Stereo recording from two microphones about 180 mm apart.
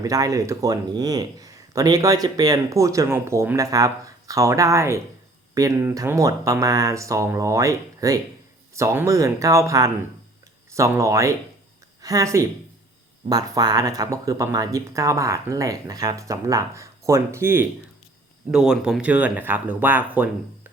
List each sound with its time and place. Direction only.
0.0 s speech: 20° right (ahead or behind)